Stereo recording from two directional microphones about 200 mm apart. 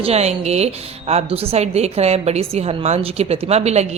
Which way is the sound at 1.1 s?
30° right (ahead or behind).